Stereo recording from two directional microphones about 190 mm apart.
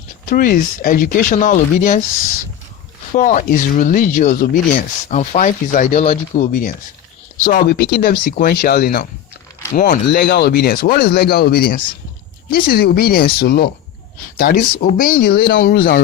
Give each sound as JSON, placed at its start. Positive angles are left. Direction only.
{"t": 0.3, "sound": "speech", "side_deg": 45}
{"t": 3.1, "sound": "speech", "side_deg": 45}
{"t": 9.7, "sound": "speech", "side_deg": 45}
{"t": 10.1, "sound": "speech", "side_deg": 55}